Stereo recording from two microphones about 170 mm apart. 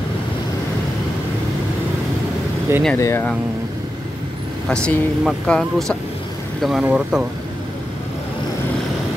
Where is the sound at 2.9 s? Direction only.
15° left (ahead or behind).